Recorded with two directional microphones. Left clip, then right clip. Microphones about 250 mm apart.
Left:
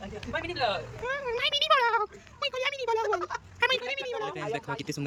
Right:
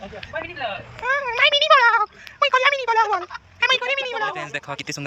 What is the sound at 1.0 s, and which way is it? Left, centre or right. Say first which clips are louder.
Speech: right 15 dB; centre.